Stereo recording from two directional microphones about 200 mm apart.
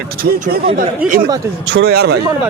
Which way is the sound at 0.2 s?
40° right (ahead or behind).